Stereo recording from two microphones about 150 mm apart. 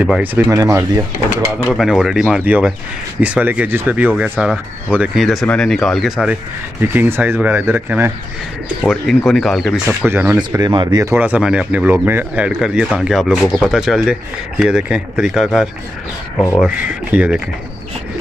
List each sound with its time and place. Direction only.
0.0 s speech: 10° right (ahead or behind)
1.7 s speech: centre (ahead or behind)
8.8 s speech: centre (ahead or behind)
10.0 s speech: 10° right (ahead or behind)
10.3 s speech: 25° right (ahead or behind)
11.1 s speech: 10° right (ahead or behind)